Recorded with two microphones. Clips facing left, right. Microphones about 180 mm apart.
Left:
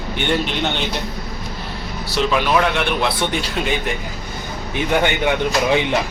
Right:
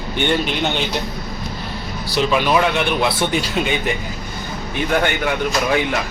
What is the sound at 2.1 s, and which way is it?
Speech, 5° right (ahead or behind).